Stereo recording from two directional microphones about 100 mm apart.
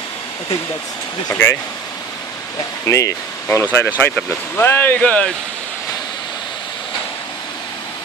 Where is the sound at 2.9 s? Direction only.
30° left (ahead or behind).